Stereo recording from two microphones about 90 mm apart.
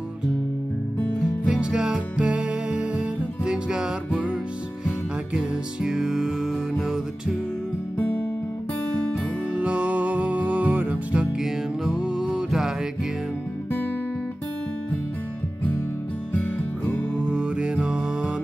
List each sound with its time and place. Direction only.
1.4 s music: 10° right (ahead or behind)
8.0 s music: 15° left (ahead or behind)
9.5 s music: 15° right (ahead or behind)
16.3 s music: 20° left (ahead or behind)
17.3 s music: 10° right (ahead or behind)